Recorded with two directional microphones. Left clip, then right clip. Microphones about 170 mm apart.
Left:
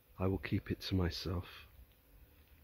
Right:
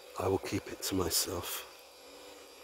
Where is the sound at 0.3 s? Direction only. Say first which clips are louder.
Right 8 dB; 5° right (ahead or behind).